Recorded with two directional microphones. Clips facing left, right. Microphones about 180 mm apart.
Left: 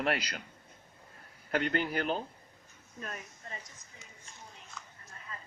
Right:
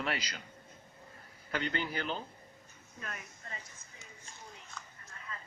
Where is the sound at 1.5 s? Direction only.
50° left (ahead or behind).